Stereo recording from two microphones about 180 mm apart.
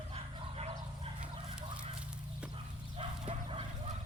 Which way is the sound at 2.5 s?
30° right (ahead or behind).